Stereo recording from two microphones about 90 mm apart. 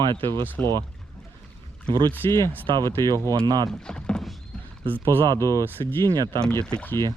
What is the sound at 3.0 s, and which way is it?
Speech, 40° right (ahead or behind).